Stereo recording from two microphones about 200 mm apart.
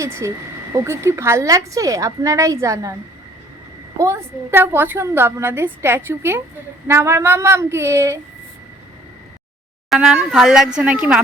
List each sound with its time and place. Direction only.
0.0 s a woman's voice: 15° right (ahead or behind)
3.9 s a woman's voice: 15° right (ahead or behind)
9.9 s a woman's voice: 5° right (ahead or behind)